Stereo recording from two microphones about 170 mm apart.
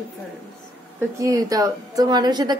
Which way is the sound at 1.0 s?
20° right (ahead or behind).